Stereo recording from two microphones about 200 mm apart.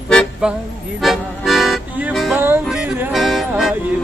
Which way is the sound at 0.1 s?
5° left (ahead or behind).